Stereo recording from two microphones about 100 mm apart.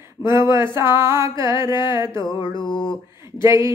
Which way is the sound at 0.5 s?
30° right (ahead or behind).